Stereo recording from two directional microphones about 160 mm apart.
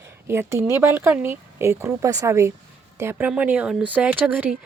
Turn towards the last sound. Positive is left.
turn(degrees=-10)  # may be behind; listen again after turning